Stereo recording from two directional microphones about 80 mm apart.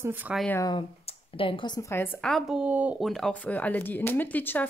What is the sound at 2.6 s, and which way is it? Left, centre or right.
Speech, centre.